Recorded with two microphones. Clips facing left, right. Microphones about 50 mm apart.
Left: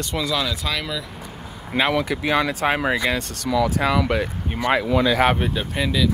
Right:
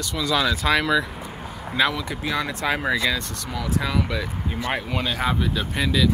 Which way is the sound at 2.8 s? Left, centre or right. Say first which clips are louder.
Left 1 dB; left.